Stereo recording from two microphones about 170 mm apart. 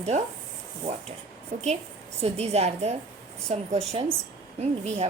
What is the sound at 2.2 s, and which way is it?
Speech, 40° right (ahead or behind).